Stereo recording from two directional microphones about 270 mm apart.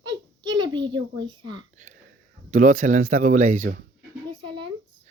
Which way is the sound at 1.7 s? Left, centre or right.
Right.